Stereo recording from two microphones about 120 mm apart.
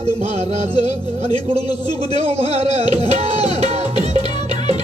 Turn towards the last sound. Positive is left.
turn(degrees=-65)  # may be behind; listen again after turning